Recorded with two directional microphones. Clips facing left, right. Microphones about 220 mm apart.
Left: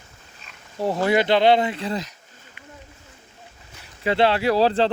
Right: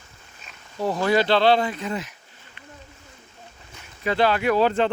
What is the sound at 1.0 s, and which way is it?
Speech, 20° left (ahead or behind).